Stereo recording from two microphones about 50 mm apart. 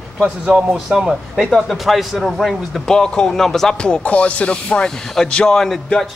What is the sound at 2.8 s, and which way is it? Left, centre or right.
Speech, centre.